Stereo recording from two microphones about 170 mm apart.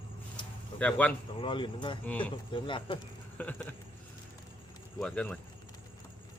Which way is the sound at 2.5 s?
30° left (ahead or behind).